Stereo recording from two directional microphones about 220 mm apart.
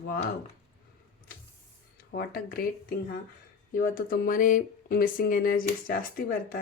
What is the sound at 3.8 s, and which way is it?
Speech, 40° left (ahead or behind).